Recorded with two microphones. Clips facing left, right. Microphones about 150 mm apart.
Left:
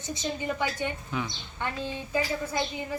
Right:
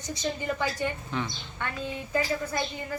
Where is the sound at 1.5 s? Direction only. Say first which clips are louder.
Left 1 dB; 25° left (ahead or behind).